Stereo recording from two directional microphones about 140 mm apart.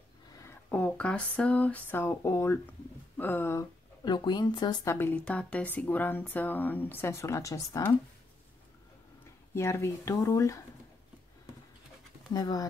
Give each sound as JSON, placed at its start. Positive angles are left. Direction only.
{"t": 0.7, "sound": "speech", "side_deg": 10}
{"t": 4.0, "sound": "speech", "side_deg": 30}
{"t": 4.9, "sound": "speech", "side_deg": 10}
{"t": 9.5, "sound": "speech", "side_deg": 20}
{"t": 12.4, "sound": "speech", "side_deg": 30}